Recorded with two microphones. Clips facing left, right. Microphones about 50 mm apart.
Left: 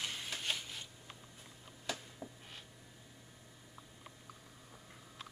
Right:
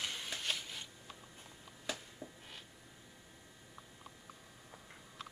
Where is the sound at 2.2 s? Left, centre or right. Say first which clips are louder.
Left 1 dB; centre.